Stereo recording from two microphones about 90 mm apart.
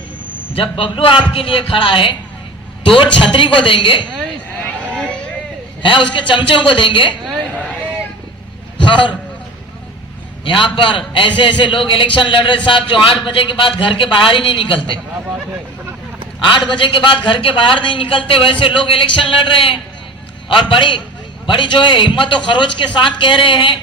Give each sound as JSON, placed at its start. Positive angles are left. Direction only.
{"t": 0.5, "sound": "a man's voice", "side_deg": 90}
{"t": 4.9, "sound": "vehicle", "side_deg": 10}
{"t": 5.8, "sound": "a man's voice", "side_deg": 65}
{"t": 8.8, "sound": "a man's voice", "side_deg": 65}
{"t": 10.4, "sound": "a man's voice", "side_deg": 75}
{"t": 16.4, "sound": "a man's voice", "side_deg": 60}